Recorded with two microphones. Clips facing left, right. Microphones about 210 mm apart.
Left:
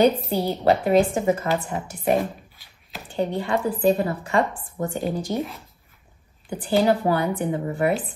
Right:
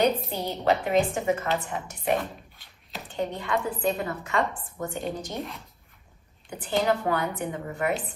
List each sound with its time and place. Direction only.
0.3 s a woman's voice: 40° left (ahead or behind)
3.2 s a woman's voice: 30° left (ahead or behind)
5.0 s speech: centre (ahead or behind)
6.8 s a woman's voice: 35° left (ahead or behind)